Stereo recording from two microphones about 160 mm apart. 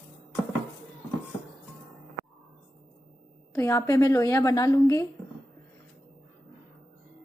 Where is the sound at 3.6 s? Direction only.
20° left (ahead or behind).